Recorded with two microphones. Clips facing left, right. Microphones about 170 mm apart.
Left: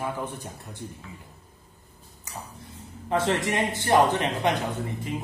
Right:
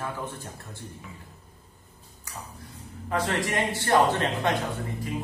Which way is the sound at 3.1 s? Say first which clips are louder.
Left 3 dB; 25° left (ahead or behind).